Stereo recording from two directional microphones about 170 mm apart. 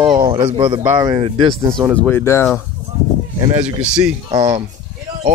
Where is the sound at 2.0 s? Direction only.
10° left (ahead or behind).